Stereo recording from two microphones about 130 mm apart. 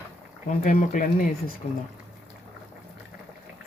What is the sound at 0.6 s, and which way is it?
Speech, 80° left.